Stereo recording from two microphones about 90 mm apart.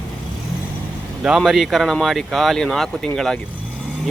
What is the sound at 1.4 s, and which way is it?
Speech, centre (ahead or behind).